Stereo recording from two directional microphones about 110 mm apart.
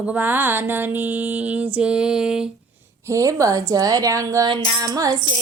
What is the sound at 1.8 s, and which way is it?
Speech, 10° right (ahead or behind).